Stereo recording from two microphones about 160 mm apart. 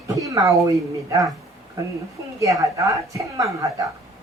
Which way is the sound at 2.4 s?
20° right (ahead or behind).